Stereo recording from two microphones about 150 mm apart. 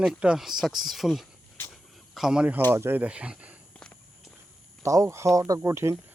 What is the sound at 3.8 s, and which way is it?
Walk, 5° left (ahead or behind).